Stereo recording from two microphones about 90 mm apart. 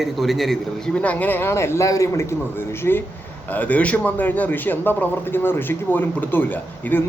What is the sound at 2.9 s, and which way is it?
A man's voice, 25° left (ahead or behind).